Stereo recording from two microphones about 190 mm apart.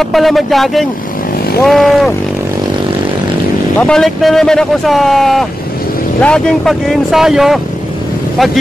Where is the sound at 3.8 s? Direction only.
5° left (ahead or behind).